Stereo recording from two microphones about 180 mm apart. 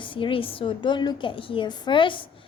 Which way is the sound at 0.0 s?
30° left (ahead or behind).